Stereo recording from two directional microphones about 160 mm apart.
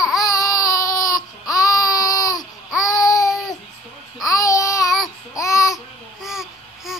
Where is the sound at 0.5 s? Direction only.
20° left (ahead or behind).